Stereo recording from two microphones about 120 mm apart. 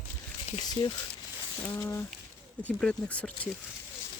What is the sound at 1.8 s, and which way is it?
Speech, 25° left (ahead or behind).